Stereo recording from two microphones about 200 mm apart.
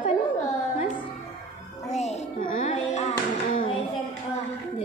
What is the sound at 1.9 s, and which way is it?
Music, 35° left (ahead or behind).